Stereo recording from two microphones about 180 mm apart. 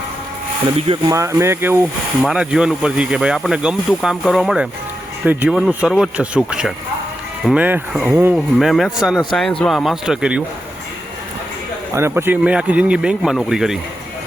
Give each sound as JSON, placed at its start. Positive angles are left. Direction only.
{"t": 0.8, "sound": "speech", "side_deg": -30}
{"t": 1.1, "sound": "speech", "side_deg": -15}
{"t": 11.9, "sound": "speech", "side_deg": -15}